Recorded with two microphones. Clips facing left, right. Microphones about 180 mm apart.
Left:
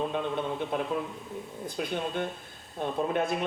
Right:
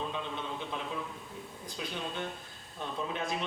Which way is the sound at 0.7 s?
55° left (ahead or behind).